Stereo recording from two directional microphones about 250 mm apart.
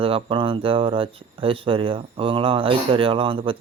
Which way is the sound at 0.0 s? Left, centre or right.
Right.